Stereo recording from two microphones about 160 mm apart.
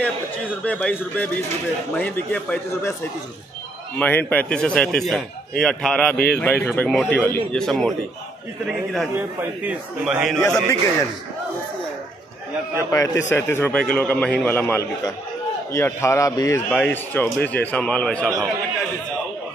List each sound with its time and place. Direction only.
0.0 s a man's voice: 10° left (ahead or behind)
4.0 s a man's voice: 10° left (ahead or behind)
6.1 s speech: 80° left
6.4 s a man's voice: 15° left (ahead or behind)
9.1 s a man's voice: 10° right (ahead or behind)
10.4 s a man's voice: 20° left (ahead or behind)
12.7 s a man's voice: 20° left (ahead or behind)
16.7 s a man's voice: 10° left (ahead or behind)